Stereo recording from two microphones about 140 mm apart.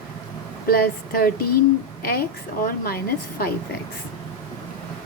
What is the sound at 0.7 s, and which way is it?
Speech, 90° left.